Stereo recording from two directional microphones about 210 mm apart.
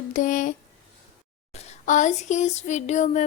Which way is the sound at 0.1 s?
40° left (ahead or behind).